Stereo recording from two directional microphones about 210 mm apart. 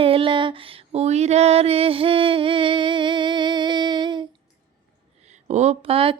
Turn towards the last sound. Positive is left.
turn(degrees=-25)  # may be behind; listen again after turning